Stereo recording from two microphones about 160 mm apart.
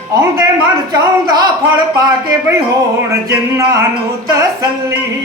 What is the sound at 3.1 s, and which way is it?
Speech, 20° right (ahead or behind).